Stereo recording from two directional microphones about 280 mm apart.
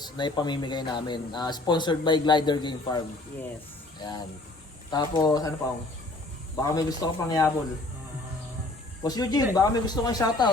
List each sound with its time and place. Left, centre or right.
0.0 s speech: centre
4.9 s speech: centre
6.6 s speech: centre
9.0 s speech: centre